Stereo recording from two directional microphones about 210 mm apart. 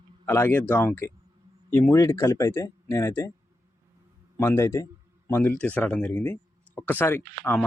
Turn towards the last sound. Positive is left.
turn(degrees=10)  # may be behind; listen again after turning